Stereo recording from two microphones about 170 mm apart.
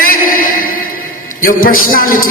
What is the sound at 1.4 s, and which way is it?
Speech, 55° left (ahead or behind).